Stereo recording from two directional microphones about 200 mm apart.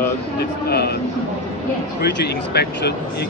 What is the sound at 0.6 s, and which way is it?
Speech, 55° left (ahead or behind).